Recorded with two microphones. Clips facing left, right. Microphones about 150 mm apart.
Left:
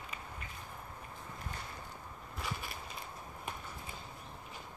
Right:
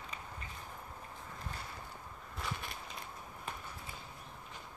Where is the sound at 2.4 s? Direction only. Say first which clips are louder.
Even; centre (ahead or behind).